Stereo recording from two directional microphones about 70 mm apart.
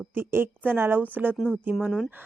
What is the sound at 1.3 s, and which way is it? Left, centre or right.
Speech, centre.